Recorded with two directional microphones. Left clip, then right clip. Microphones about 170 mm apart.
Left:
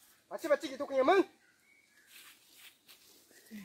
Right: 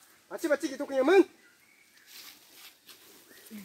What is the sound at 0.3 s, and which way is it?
Speech, 50° right (ahead or behind).